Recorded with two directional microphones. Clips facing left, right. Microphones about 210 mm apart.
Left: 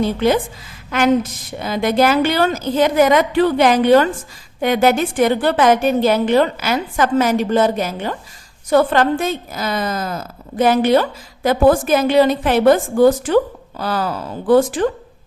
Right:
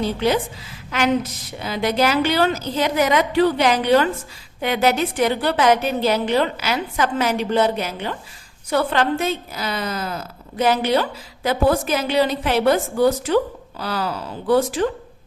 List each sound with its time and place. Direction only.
0.0 s a woman's voice: 50° left (ahead or behind)